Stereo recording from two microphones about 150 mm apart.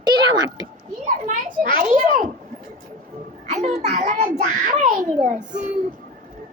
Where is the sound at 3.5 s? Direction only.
50° right (ahead or behind).